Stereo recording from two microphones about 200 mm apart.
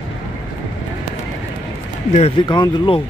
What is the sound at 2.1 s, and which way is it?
Speech, 30° left (ahead or behind).